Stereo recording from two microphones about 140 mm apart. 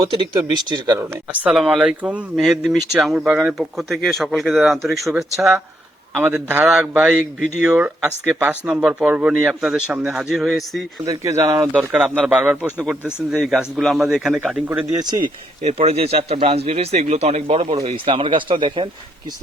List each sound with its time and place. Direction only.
0.1 s speech: 40° right (ahead or behind)
0.9 s speech: 15° right (ahead or behind)
1.5 s speech: centre (ahead or behind)
11.0 s speech: 25° right (ahead or behind); by 14.6 s 5° right (ahead or behind)
14.9 s speech: 30° right (ahead or behind)
15.6 s a man's voice: 50° right (ahead or behind)